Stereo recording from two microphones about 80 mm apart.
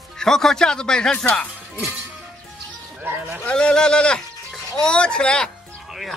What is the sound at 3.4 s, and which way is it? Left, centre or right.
Speech, centre.